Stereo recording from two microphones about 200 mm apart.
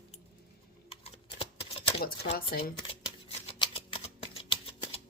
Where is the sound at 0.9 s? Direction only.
30° left (ahead or behind).